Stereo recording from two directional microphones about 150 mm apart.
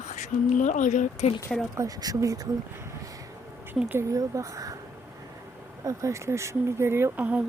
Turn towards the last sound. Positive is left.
turn(degrees=-10)  # may be behind; listen again after turning